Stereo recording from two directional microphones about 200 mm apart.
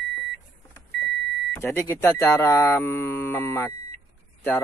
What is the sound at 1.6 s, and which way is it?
Speech, 10° left (ahead or behind).